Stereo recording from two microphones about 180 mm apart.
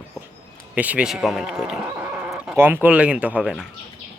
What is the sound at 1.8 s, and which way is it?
Speech, 15° right (ahead or behind).